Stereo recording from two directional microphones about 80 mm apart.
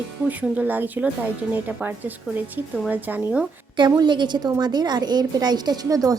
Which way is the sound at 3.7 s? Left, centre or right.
Right.